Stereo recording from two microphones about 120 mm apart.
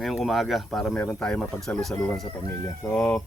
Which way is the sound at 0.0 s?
Centre (ahead or behind).